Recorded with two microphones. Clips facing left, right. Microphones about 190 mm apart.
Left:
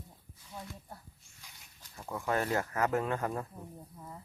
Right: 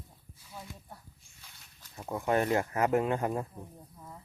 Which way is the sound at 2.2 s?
20° right (ahead or behind).